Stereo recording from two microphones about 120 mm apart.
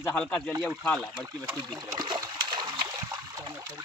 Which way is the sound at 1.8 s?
40° right (ahead or behind).